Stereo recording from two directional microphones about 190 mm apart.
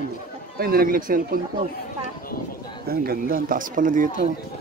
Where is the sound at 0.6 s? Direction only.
50° right (ahead or behind).